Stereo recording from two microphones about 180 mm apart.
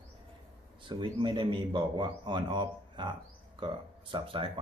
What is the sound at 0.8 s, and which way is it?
A man's voice, 25° right (ahead or behind).